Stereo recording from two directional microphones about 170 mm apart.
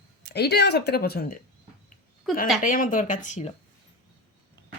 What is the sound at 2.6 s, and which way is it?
Speech, 55° left (ahead or behind).